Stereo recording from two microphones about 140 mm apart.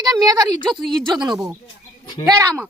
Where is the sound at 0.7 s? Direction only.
5° left (ahead or behind).